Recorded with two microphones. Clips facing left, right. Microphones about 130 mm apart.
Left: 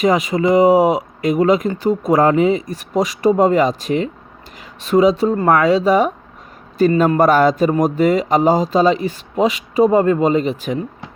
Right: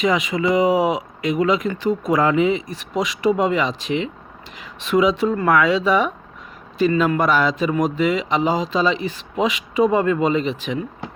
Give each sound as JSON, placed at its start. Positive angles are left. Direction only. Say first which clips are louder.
{"t": 0.0, "sound": "speech", "louder": "left 4 dB", "side_deg": 45}